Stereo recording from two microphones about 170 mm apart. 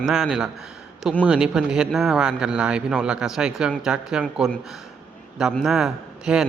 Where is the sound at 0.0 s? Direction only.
Centre (ahead or behind).